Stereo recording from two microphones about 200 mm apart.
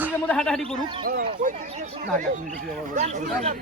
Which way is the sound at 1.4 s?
40° right (ahead or behind).